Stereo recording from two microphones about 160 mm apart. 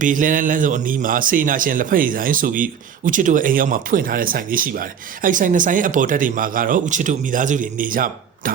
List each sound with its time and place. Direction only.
0.0 s speech: 55° right (ahead or behind)